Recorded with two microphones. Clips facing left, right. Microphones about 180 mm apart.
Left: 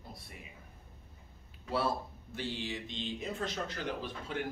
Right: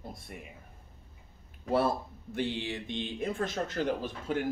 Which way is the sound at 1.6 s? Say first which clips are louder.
Right 5 dB; 50° right (ahead or behind).